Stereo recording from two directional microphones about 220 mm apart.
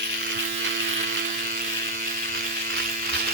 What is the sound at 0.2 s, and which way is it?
Electric shaver, 50° right (ahead or behind).